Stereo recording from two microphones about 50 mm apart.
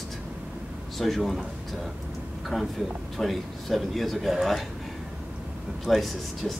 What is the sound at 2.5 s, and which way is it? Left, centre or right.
Speech, centre.